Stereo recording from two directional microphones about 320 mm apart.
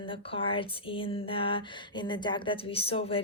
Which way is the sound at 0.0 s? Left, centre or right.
Centre.